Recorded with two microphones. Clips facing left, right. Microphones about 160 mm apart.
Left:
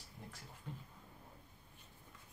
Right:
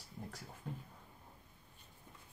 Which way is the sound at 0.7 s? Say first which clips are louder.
Right 4 dB; 45° right (ahead or behind).